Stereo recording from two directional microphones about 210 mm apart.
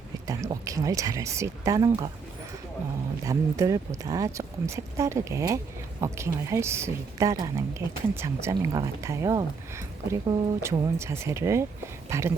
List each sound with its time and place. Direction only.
0.3 s speech: 15° right (ahead or behind)
3.2 s speech: 15° right (ahead or behind)